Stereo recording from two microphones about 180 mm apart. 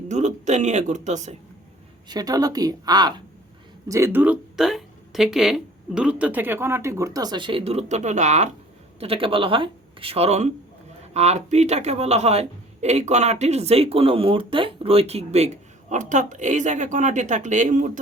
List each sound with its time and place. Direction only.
0.1 s a man's voice: 40° right (ahead or behind)
2.0 s a man's voice: 20° right (ahead or behind); by 18.0 s 45° right (ahead or behind)